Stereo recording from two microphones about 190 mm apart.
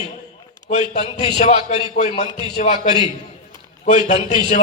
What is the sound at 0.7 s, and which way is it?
A man's voice, 40° left (ahead or behind).